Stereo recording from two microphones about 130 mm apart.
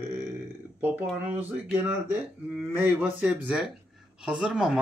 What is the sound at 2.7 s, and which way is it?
Speech, 15° right (ahead or behind).